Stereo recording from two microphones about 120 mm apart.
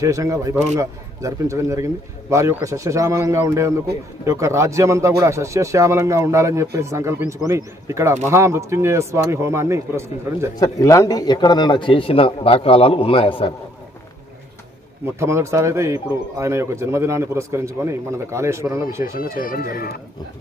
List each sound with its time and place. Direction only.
0.0 s speech: 25° right (ahead or behind)
10.6 s a man's voice: 25° left (ahead or behind); by 13.5 s 50° left (ahead or behind)
15.0 s speech: 20° right (ahead or behind)